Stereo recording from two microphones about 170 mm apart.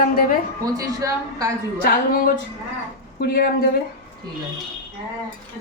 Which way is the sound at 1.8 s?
60° left (ahead or behind).